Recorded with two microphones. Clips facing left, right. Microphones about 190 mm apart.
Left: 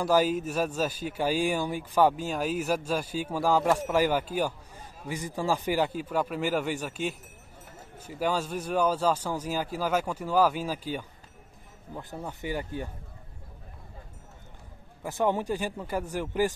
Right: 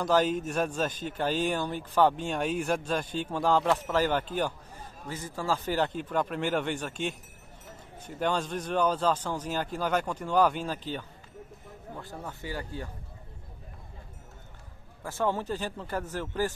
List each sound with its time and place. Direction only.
0.0 s speech: 5° left (ahead or behind)
15.0 s speech: 15° left (ahead or behind)